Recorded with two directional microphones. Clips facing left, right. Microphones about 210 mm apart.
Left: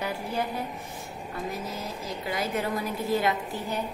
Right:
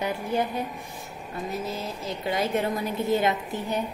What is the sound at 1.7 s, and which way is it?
A woman's voice, 25° right (ahead or behind).